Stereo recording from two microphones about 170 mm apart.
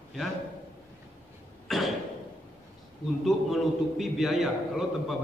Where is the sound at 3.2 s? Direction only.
Centre (ahead or behind).